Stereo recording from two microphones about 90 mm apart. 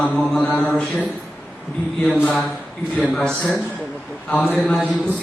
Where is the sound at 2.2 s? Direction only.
5° left (ahead or behind).